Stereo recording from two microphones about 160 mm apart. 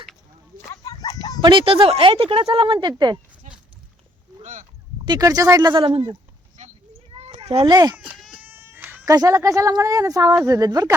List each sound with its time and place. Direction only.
0.7 s a sound: 20° left (ahead or behind)
1.4 s speech: 30° right (ahead or behind)
5.0 s speech: 25° right (ahead or behind)
6.6 s a sound: 45° right (ahead or behind)
7.3 s cat: 40° right (ahead or behind)
7.7 s speech: 25° right (ahead or behind)
7.9 s cat: 5° right (ahead or behind)
8.4 s speech: 15° right (ahead or behind)